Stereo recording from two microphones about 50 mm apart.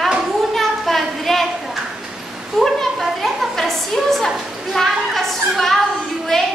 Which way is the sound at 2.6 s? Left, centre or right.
Centre.